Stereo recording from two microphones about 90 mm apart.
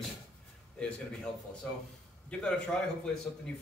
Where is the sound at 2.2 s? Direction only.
10° left (ahead or behind).